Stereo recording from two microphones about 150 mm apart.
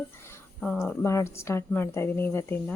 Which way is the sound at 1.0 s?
20° left (ahead or behind).